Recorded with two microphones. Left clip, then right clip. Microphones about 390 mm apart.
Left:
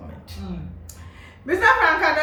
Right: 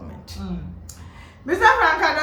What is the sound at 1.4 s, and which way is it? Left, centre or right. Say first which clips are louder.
Speech: right 1 dB; centre.